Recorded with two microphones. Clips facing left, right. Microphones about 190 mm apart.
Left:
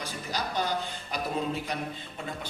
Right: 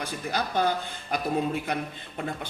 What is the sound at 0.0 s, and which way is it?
Speech, 55° right (ahead or behind).